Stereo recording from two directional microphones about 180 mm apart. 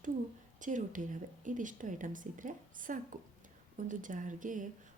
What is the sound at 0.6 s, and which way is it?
A woman's voice, 45° right (ahead or behind).